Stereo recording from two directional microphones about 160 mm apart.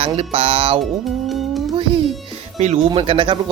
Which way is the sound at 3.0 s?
35° right (ahead or behind).